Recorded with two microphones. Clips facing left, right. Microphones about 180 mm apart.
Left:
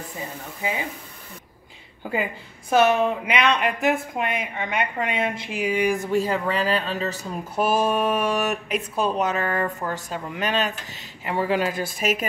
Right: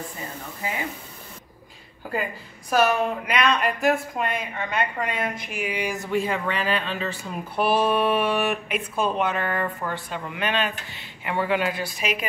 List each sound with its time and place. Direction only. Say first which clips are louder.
2.7 s a woman's voice: left 3 dB; 25° left (ahead or behind)
5.7 s speech: left 6 dB; 50° left (ahead or behind)